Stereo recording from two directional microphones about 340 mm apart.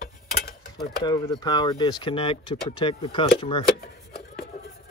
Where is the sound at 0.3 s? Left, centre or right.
Left.